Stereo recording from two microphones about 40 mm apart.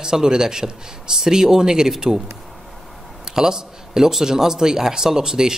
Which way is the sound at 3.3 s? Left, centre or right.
Centre.